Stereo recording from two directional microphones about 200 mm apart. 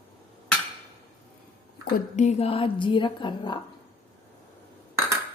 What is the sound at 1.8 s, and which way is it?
A woman's voice, 35° left (ahead or behind).